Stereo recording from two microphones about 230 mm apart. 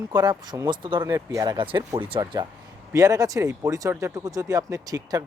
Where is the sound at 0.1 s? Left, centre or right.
Centre.